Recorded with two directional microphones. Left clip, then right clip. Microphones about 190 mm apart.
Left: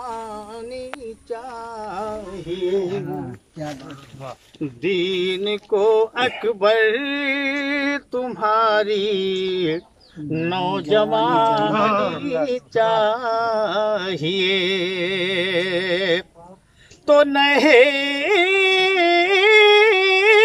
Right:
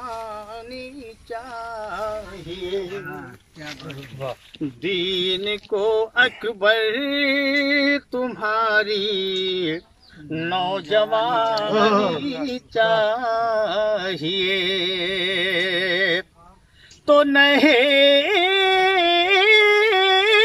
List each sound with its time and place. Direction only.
0.0 s a sound: 10° left (ahead or behind)
3.1 s speech: 30° left (ahead or behind)
4.8 s male singing: 5° left (ahead or behind)
10.4 s mantra: 5° left (ahead or behind)
11.7 s speech: 35° right (ahead or behind)
12.2 s speech: 30° left (ahead or behind)
12.7 s mantra: 5° left (ahead or behind)
17.0 s carnatic music: 5° left (ahead or behind)